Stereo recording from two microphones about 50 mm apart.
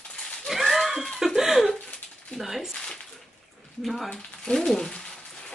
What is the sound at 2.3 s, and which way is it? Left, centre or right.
Speech, centre.